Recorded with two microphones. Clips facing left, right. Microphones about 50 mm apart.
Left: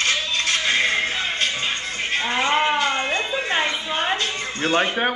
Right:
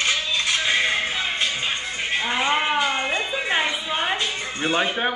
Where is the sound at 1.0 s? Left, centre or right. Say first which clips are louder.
Left 1 dB; centre.